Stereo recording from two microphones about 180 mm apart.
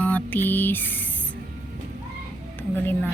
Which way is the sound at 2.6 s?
10° left (ahead or behind).